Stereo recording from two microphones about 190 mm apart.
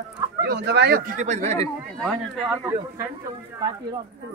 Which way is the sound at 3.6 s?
20° right (ahead or behind).